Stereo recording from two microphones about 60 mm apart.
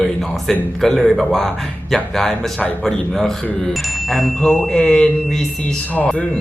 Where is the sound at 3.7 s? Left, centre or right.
Centre.